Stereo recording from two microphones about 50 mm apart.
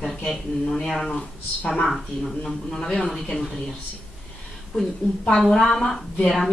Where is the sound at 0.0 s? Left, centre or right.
Centre.